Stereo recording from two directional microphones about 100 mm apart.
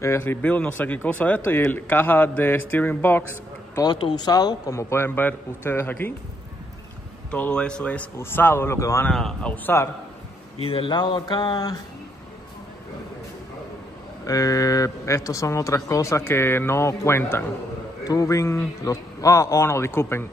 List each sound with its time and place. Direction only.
0.0 s speech: 25° left (ahead or behind)
3.8 s speech: 50° left (ahead or behind)
4.7 s speech: 25° left (ahead or behind)
7.2 s speech: 15° left (ahead or behind); by 9.0 s 30° left (ahead or behind)
9.1 s speech: 5° left (ahead or behind)
9.8 s speech: 30° left (ahead or behind)
10.6 s speech: 70° left (ahead or behind)
10.9 s speech: 50° left (ahead or behind)
14.2 s speech: 35° left (ahead or behind)
18.0 s a man's voice: 35° left (ahead or behind)